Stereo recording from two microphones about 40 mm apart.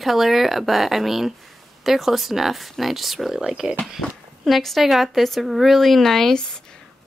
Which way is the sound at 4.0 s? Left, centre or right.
Centre.